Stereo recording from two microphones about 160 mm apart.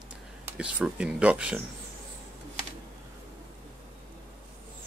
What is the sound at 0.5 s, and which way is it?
Speech, 10° right (ahead or behind).